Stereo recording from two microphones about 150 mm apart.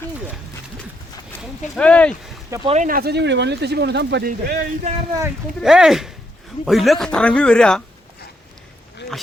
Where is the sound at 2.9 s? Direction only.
90° right.